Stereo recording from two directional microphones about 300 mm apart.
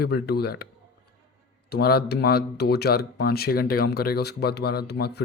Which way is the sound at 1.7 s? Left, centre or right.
Left.